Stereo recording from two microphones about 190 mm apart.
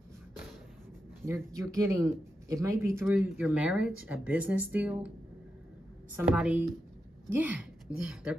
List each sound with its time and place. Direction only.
1.2 s speech: 15° right (ahead or behind)
6.1 s a woman's voice: 5° right (ahead or behind)